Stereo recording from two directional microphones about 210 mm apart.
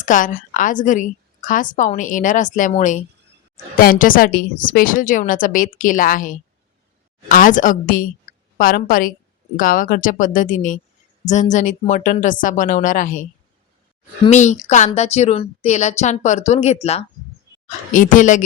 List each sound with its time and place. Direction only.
0.0 s a woman's voice: 40° left (ahead or behind)
14.3 s a woman's voice: 35° left (ahead or behind)